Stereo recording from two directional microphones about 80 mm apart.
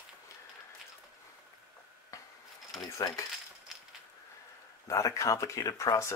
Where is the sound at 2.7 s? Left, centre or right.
Left.